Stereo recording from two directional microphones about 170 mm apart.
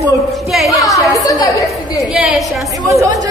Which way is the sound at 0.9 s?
20° left (ahead or behind).